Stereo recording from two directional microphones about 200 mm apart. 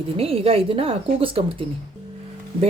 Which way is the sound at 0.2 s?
30° right (ahead or behind).